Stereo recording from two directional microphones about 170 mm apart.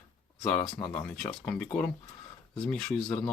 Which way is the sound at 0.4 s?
5° left (ahead or behind).